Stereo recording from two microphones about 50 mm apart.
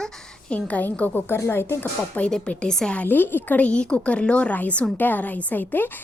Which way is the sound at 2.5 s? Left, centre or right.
Centre.